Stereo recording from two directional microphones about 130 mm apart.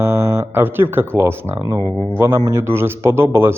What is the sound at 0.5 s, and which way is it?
Speech, 15° right (ahead or behind).